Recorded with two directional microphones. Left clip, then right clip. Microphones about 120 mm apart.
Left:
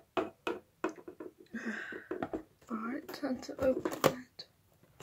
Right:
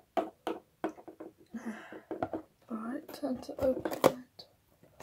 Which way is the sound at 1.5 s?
10° right (ahead or behind).